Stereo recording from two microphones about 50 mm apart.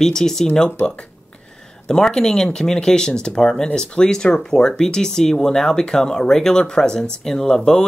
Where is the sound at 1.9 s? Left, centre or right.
Centre.